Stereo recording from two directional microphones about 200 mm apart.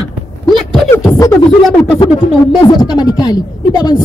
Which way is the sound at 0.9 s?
15° left (ahead or behind).